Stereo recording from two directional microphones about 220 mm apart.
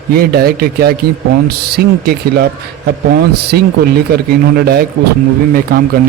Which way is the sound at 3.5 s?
45° right (ahead or behind).